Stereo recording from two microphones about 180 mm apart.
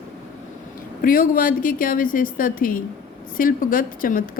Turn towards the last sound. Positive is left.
turn(degrees=50)  # may be behind; listen again after turning